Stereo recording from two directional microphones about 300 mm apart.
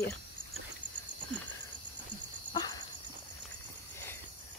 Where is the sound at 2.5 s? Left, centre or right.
Centre.